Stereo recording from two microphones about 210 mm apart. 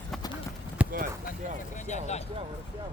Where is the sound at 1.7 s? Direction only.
35° left (ahead or behind).